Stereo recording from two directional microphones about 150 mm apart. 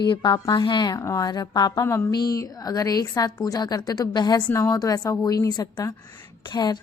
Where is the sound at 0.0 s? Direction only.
30° left (ahead or behind).